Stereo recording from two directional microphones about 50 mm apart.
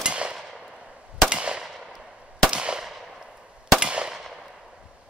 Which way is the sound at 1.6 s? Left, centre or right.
Centre.